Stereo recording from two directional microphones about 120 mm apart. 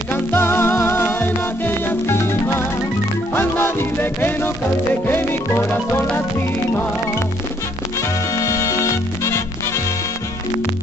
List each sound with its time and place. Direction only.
0.1 s music: 20° left (ahead or behind)
8.4 s music: 25° left (ahead or behind)